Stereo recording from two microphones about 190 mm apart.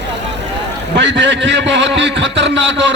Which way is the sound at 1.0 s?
70° right (ahead or behind).